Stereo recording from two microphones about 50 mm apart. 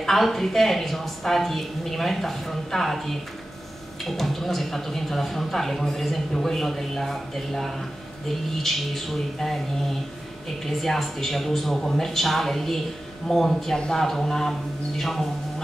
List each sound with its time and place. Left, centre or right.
0.0 s speech: centre
13.7 s speech: centre